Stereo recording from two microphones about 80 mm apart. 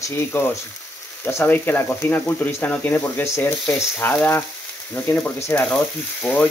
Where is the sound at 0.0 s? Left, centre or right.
Left.